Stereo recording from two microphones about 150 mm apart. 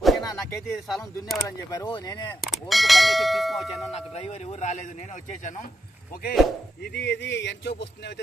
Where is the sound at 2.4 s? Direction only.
Centre (ahead or behind).